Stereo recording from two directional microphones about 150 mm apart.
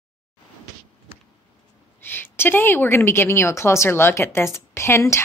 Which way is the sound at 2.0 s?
15° left (ahead or behind).